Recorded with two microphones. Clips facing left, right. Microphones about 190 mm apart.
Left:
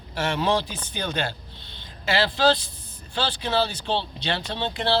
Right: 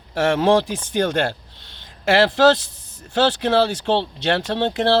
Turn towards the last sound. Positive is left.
turn(degrees=-90)